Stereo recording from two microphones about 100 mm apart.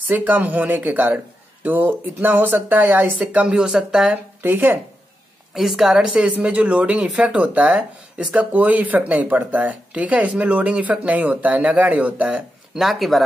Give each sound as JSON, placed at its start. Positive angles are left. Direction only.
{"t": 0.1, "sound": "speech", "side_deg": -20}
{"t": 4.4, "sound": "speech", "side_deg": -20}
{"t": 5.5, "sound": "speech", "side_deg": -5}